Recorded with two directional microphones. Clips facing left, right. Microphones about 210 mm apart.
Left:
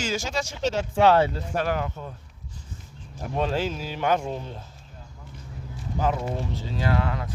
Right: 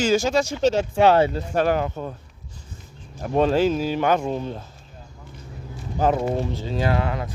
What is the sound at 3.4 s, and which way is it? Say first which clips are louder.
Speech: right 8 dB; 45° right (ahead or behind).